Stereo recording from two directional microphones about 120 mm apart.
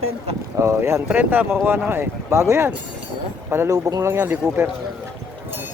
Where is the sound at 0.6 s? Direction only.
20° right (ahead or behind).